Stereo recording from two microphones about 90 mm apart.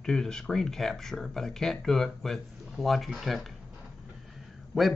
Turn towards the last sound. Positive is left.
turn(degrees=0)  # may be behind; listen again after turning